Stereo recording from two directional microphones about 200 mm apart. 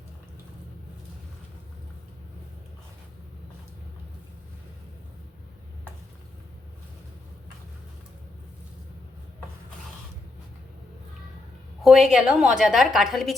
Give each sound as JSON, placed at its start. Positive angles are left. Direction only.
{"t": 11.8, "sound": "a woman's voice", "side_deg": 0}